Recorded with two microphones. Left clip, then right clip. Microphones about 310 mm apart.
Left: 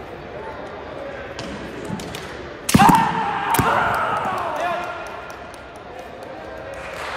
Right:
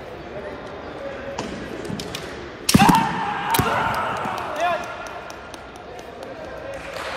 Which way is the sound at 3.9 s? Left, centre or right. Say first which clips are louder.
Left 3 dB; centre.